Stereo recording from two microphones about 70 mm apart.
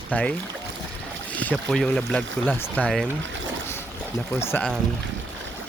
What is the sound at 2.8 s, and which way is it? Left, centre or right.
Speech, left.